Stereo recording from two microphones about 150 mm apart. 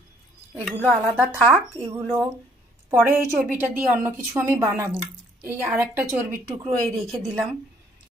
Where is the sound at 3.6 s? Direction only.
10° right (ahead or behind).